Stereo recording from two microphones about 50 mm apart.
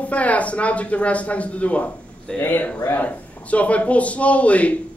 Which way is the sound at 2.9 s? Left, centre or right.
Left.